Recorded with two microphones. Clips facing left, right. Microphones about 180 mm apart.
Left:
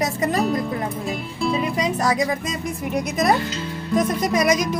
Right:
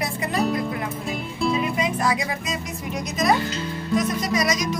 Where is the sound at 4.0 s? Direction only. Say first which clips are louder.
Left 5 dB; 50° left (ahead or behind).